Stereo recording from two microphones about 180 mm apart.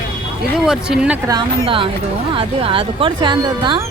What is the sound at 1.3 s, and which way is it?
Speech, 30° right (ahead or behind).